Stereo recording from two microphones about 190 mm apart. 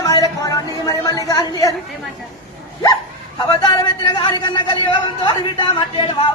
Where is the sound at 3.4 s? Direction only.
20° left (ahead or behind).